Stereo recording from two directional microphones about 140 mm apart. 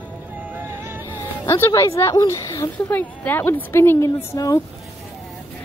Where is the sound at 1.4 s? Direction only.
15° left (ahead or behind).